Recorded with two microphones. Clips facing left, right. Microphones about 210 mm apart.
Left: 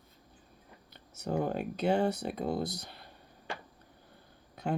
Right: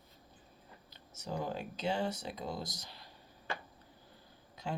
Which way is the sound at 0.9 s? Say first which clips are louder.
Left 7 dB; 60° left (ahead or behind).